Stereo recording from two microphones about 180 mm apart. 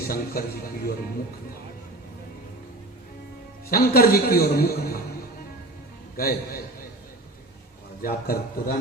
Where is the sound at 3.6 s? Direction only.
60° left (ahead or behind).